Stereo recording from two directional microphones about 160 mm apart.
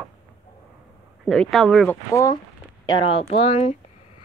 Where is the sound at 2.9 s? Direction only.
35° left (ahead or behind).